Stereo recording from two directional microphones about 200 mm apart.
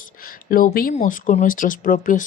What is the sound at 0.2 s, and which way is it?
Speech, 45° left (ahead or behind).